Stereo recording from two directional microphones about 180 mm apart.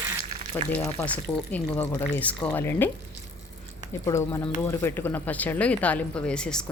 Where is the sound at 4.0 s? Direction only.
15° left (ahead or behind).